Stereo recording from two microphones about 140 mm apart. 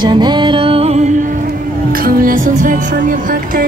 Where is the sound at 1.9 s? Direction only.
90° right; by 3.6 s 75° right (ahead or behind).